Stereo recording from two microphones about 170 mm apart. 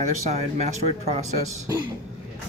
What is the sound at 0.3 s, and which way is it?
Speech, 40° right (ahead or behind).